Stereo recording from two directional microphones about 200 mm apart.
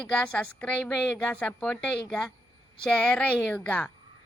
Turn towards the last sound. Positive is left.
turn(degrees=5)  # may be behind; listen again after turning